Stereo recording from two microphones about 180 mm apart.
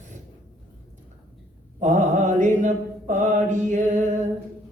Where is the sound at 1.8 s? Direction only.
40° right (ahead or behind).